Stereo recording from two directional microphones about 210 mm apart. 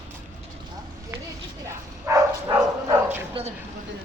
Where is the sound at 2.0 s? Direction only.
15° right (ahead or behind).